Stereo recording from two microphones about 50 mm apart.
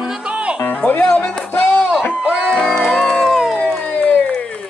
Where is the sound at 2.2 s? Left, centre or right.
Right.